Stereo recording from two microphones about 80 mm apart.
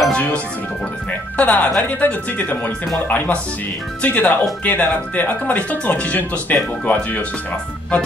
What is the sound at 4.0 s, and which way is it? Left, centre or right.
Speech, centre.